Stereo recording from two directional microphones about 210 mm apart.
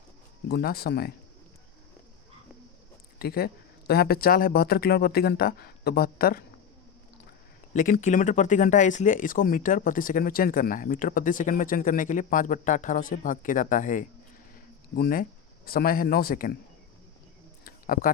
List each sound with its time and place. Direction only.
0.4 s speech: 50° left (ahead or behind)
3.2 s speech: 45° left (ahead or behind)
7.7 s speech: 40° left (ahead or behind)
17.6 s a sound: 40° left (ahead or behind)